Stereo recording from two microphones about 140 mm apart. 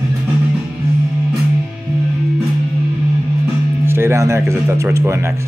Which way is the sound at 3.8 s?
15° right (ahead or behind).